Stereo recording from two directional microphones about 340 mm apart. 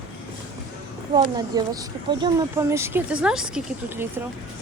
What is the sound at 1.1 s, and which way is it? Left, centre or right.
Speech, centre.